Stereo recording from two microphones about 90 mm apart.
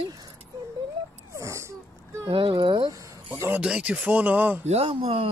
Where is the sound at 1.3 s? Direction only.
35° right (ahead or behind).